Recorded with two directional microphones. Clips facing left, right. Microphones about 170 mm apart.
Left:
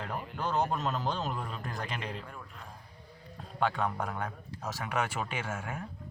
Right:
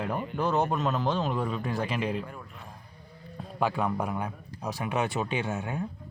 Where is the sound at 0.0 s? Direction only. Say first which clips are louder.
Right 7 dB; centre (ahead or behind); by 5.8 s 20° right (ahead or behind).